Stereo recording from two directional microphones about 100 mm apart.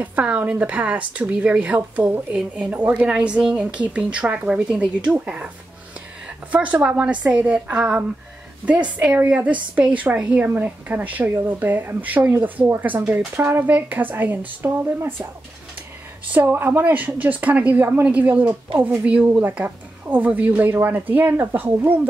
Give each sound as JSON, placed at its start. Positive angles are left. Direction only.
{"t": 0.0, "sound": "speech", "side_deg": -15}
{"t": 6.5, "sound": "speech", "side_deg": -15}
{"t": 16.3, "sound": "speech", "side_deg": -20}